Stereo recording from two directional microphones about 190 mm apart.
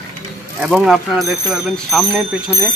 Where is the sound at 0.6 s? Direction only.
5° right (ahead or behind).